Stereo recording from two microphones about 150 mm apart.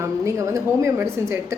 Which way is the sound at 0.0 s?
20° right (ahead or behind).